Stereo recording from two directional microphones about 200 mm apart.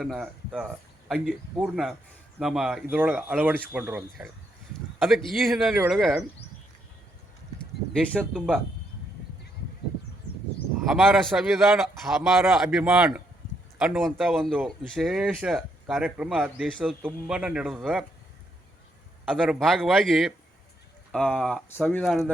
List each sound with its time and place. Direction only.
0.0 s speech: centre (ahead or behind)
7.9 s speech: 5° left (ahead or behind)
10.8 s speech: centre (ahead or behind)
19.2 s speech: centre (ahead or behind)